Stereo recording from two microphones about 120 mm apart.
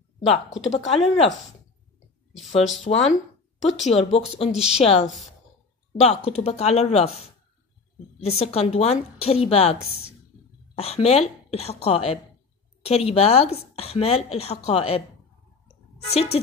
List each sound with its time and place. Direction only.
0.7 s speech: 55° left (ahead or behind)
2.8 s speech: 70° left (ahead or behind)
3.6 s speech: 60° left (ahead or behind)
16.1 s speech: 60° left (ahead or behind)